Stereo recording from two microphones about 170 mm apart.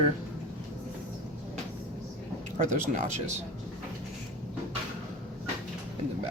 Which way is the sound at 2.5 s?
45° right (ahead or behind).